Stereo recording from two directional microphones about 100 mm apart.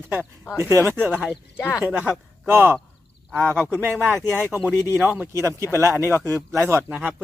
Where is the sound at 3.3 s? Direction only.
10° left (ahead or behind).